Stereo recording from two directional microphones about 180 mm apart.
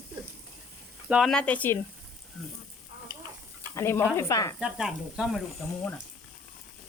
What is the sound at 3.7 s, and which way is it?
Frying, 15° left (ahead or behind).